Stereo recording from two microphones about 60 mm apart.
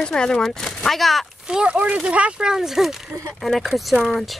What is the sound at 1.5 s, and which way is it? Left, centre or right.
Speech, centre.